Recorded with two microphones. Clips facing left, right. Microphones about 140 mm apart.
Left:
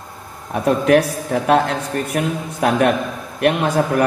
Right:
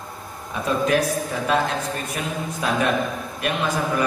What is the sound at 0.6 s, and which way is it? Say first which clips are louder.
A man's voice: left 6 dB; 65° left (ahead or behind).